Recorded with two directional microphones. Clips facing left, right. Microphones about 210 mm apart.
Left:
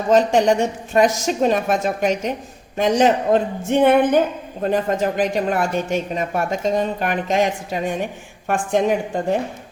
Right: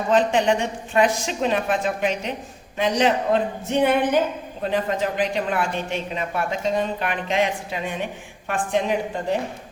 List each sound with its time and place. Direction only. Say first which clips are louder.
0.1 s a man's voice: left 4 dB; 40° left (ahead or behind)